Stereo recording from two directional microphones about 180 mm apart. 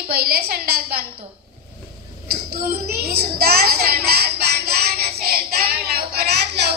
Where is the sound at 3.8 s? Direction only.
60° right (ahead or behind).